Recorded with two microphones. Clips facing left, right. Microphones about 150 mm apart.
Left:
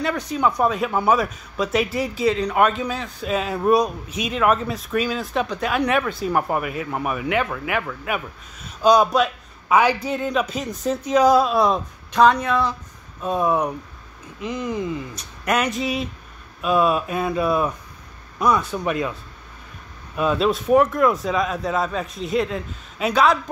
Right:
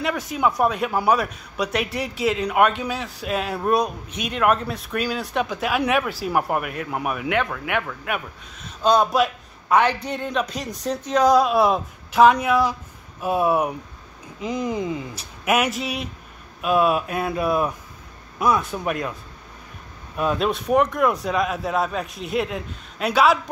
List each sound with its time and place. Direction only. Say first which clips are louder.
0.0 s speech: left 1 dB; centre (ahead or behind); by 15.0 s 20° right (ahead or behind)
15.1 s speech: right 2 dB; 5° right (ahead or behind)
20.2 s speech: left 2 dB; centre (ahead or behind)